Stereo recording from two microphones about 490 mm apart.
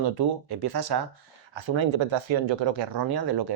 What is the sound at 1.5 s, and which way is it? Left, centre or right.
Speech, right.